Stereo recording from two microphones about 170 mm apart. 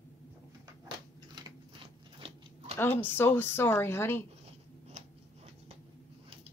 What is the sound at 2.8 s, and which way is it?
Speech, 15° left (ahead or behind).